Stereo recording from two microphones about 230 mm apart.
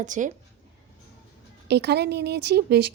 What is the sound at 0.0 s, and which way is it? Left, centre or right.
Speech, right.